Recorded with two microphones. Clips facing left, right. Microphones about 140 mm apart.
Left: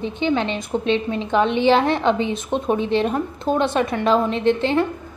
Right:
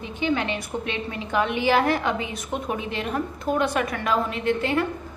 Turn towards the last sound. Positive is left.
turn(degrees=25)  # may be behind; listen again after turning